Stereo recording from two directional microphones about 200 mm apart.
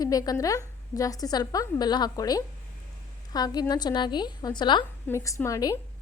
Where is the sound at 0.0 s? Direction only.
20° left (ahead or behind).